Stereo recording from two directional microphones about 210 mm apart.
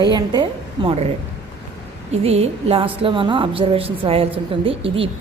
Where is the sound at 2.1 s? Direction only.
30° right (ahead or behind).